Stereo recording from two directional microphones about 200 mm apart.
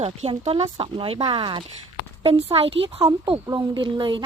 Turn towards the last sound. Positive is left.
turn(degrees=-25)  # may be behind; listen again after turning